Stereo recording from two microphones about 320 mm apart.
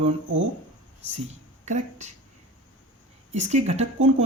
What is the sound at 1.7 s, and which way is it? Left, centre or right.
Speech, right.